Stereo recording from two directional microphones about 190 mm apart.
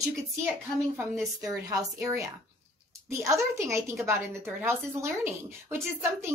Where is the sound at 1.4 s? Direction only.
20° right (ahead or behind).